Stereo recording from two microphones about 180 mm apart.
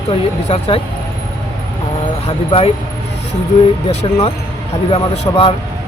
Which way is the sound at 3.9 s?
35° left (ahead or behind).